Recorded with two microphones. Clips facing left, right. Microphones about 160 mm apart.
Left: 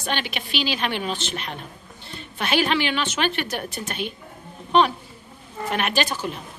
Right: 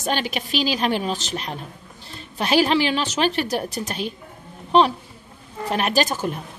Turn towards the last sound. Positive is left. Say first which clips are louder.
# right 3 dB
turn(degrees=-45)  # may be behind; listen again after turning